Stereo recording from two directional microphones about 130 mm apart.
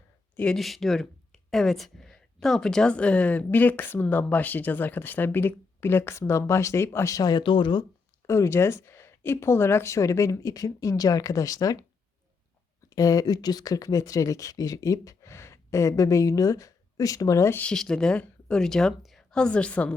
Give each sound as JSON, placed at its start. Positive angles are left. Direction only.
{"t": 0.3, "sound": "speech", "side_deg": 5}
{"t": 8.3, "sound": "speech", "side_deg": 20}
{"t": 12.9, "sound": "speech", "side_deg": 30}
{"t": 17.7, "sound": "a woman's voice", "side_deg": 5}